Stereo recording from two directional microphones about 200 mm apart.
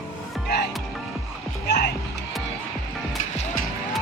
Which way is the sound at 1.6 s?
55° left (ahead or behind).